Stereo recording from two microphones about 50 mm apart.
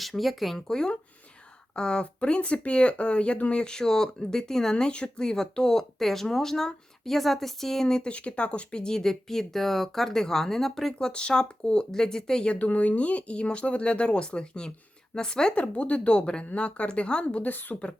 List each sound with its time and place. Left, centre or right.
0.0 s speech: centre
0.7 s speech: centre
8.1 s speech: left; by 10.9 s centre
11.0 s speech: centre
12.5 s speech: left
17.5 s speech: left